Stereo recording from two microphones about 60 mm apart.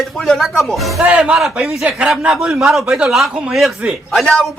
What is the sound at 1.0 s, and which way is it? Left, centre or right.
A man's voice, centre.